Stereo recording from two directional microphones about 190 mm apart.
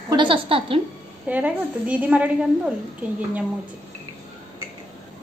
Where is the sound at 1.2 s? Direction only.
5° right (ahead or behind).